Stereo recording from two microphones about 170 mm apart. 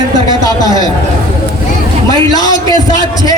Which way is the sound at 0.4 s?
20° left (ahead or behind).